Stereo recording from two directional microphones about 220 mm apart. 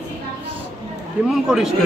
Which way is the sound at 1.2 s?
5° right (ahead or behind).